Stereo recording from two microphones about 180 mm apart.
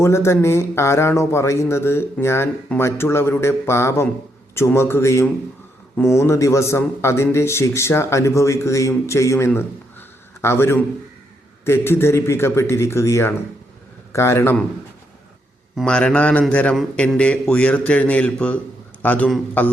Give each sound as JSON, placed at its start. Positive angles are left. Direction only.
{"t": 0.0, "sound": "a man's voice", "side_deg": 15}
{"t": 15.7, "sound": "a man's voice", "side_deg": 5}